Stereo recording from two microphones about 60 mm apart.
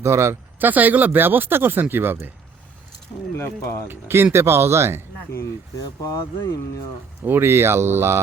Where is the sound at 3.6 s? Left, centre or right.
Left.